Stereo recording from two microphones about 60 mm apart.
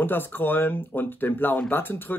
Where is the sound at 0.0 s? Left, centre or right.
Left.